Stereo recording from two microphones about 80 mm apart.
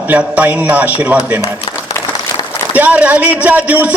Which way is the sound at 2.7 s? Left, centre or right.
Centre.